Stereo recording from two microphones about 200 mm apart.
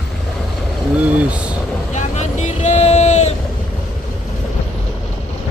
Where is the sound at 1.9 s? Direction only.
35° left (ahead or behind).